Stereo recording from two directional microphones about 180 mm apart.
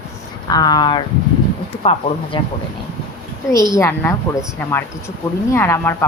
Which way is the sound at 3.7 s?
15° left (ahead or behind).